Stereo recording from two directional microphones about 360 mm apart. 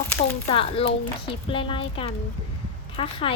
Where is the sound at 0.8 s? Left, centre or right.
Centre.